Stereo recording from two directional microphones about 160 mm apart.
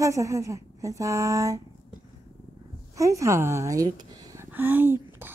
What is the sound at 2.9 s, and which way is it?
A woman's voice, 20° right (ahead or behind).